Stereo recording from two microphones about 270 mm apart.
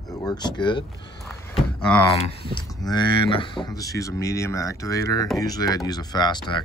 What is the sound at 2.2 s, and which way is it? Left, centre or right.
Speech, centre.